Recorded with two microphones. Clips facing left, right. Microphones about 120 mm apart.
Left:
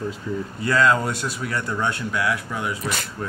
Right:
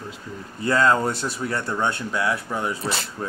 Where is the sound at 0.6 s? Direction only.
30° right (ahead or behind).